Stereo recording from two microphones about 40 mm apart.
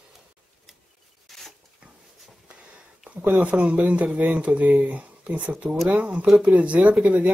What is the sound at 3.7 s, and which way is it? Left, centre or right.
Speech, right.